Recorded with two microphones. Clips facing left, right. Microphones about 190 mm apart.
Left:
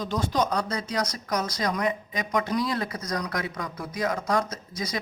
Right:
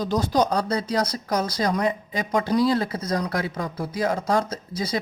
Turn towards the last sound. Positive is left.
turn(degrees=-30)  # may be behind; listen again after turning